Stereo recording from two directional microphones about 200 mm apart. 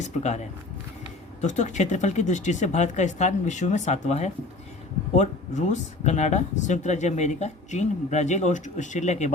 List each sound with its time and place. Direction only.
0.2 s speech: 35° left (ahead or behind)